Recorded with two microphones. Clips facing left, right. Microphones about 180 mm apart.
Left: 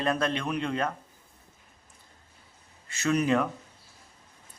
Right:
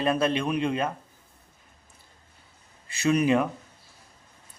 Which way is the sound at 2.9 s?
15° right (ahead or behind).